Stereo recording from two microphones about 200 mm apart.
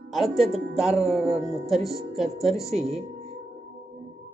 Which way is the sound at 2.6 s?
30° right (ahead or behind).